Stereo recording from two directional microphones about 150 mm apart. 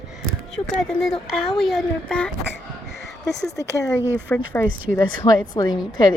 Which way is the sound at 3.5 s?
20° left (ahead or behind).